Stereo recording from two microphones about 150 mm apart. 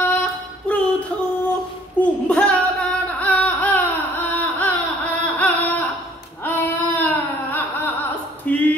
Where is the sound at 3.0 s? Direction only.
10° left (ahead or behind).